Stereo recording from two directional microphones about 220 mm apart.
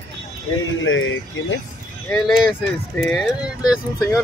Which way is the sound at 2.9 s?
Centre (ahead or behind).